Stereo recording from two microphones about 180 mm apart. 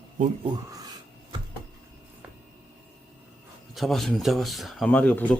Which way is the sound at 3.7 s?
Centre (ahead or behind).